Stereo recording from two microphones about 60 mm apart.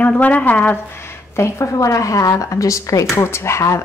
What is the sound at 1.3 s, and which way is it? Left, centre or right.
A woman's voice, left.